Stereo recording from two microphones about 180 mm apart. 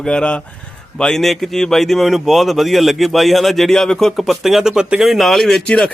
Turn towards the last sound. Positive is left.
turn(degrees=5)  # may be behind; listen again after turning